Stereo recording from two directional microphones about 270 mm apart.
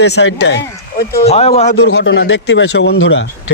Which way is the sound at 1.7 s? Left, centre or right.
Left.